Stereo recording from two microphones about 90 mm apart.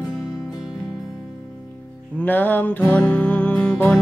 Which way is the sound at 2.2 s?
20° left (ahead or behind).